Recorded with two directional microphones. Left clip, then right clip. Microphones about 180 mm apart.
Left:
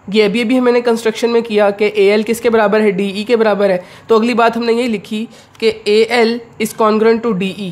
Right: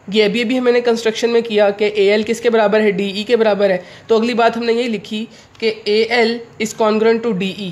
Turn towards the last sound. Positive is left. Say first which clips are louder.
# left 2 dB
turn(degrees=15)  # may be behind; listen again after turning